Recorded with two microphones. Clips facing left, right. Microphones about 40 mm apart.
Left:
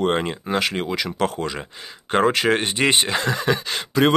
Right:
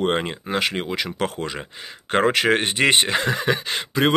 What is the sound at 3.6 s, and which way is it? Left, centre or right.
Speech, centre.